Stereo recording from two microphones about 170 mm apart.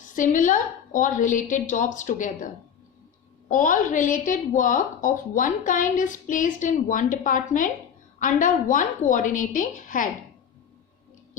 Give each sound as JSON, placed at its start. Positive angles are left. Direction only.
{"t": 0.1, "sound": "a woman's voice", "side_deg": 50}
{"t": 3.5, "sound": "a woman's voice", "side_deg": 50}